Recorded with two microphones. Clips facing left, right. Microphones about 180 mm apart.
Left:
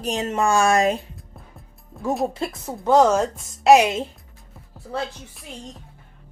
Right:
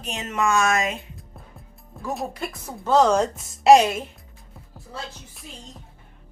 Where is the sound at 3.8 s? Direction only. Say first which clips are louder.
Left 2 dB; 20° left (ahead or behind).